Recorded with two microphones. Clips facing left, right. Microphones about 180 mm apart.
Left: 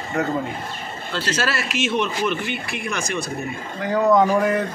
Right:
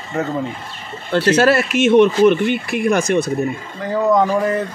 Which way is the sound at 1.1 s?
60° right (ahead or behind).